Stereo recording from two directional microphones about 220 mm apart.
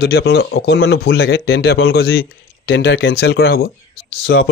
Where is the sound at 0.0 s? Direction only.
45° left (ahead or behind).